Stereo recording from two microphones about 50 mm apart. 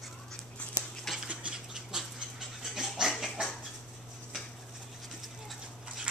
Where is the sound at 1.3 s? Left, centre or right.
Right.